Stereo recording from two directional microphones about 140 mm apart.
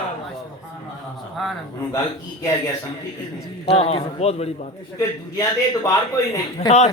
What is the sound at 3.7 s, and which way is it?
Speech, 45° left (ahead or behind).